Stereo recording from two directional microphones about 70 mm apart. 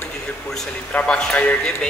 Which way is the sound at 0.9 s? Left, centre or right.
Centre.